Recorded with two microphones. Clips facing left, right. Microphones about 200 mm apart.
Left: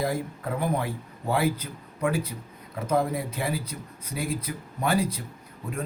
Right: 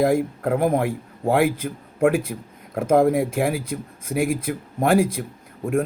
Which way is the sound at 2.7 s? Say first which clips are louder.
Right 8 dB; 50° right (ahead or behind).